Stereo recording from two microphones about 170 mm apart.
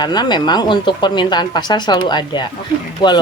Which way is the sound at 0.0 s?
25° left (ahead or behind).